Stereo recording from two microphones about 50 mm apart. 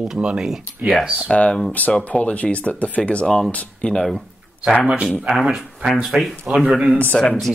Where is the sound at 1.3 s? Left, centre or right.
Left.